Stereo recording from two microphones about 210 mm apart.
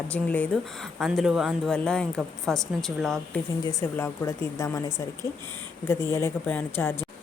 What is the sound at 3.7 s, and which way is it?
Speech, 15° left (ahead or behind).